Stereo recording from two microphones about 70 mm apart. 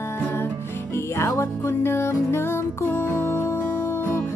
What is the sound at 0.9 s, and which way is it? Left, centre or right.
Music, left.